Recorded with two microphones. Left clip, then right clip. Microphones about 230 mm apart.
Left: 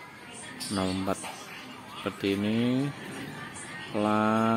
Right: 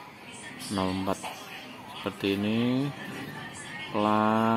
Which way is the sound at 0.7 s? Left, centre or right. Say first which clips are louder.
Right 1 dB; centre.